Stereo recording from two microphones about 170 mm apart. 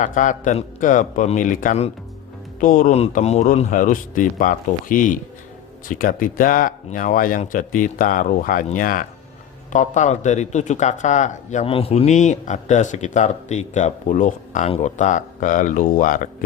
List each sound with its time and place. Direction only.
0.0 s speech: 50° left (ahead or behind)